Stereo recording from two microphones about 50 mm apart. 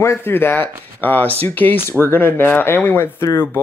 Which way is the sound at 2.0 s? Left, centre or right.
Left.